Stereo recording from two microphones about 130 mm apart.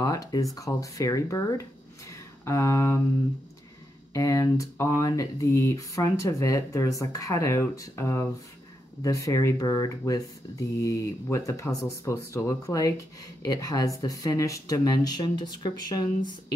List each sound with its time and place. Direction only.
0.0 s speech: 30° left (ahead or behind)
4.1 s speech: 25° left (ahead or behind)